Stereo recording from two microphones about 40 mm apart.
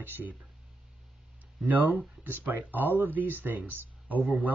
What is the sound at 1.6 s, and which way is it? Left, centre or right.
Speech, right.